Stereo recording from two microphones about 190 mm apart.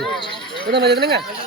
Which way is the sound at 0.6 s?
60° right (ahead or behind).